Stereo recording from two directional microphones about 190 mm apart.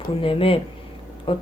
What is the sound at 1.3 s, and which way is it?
Speech, 30° left (ahead or behind).